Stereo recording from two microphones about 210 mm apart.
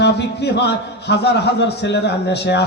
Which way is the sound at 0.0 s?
55° left (ahead or behind).